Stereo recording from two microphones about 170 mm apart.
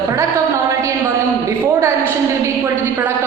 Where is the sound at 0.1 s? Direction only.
15° right (ahead or behind).